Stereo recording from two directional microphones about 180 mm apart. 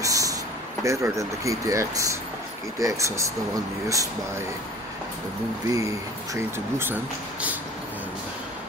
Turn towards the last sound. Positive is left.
turn(degrees=-10)  # may be behind; listen again after turning